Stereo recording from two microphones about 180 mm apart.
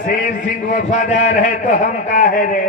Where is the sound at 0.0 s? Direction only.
45° left (ahead or behind).